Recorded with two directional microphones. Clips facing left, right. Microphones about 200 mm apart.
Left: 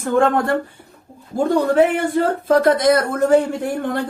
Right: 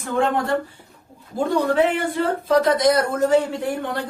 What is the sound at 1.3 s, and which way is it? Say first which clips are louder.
Speech: left 4 dB; 50° left (ahead or behind).